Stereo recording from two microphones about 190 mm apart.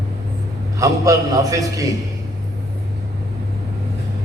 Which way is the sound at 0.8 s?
20° right (ahead or behind).